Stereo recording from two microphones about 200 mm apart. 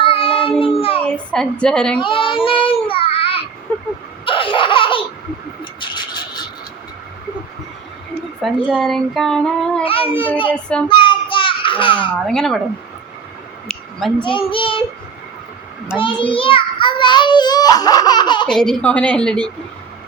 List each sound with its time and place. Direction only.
0.0 s child singing: 25° left (ahead or behind)
1.0 s speech: 5° left (ahead or behind)
2.0 s child singing: 25° left (ahead or behind)
4.3 s laughter: 25° left (ahead or behind)
5.8 s a sound: 20° left (ahead or behind)
8.6 s speech: centre (ahead or behind)
9.8 s a child's voice: 25° left (ahead or behind)
10.5 s speech: 5° left (ahead or behind)
10.8 s child singing: 25° left (ahead or behind)
12.2 s speech: centre (ahead or behind)
13.7 s a sound: 5° left (ahead or behind)
14.2 s a child's voice: 25° left (ahead or behind)
16.0 s a child's voice: 25° left (ahead or behind)
18.4 s speech: 5° left (ahead or behind)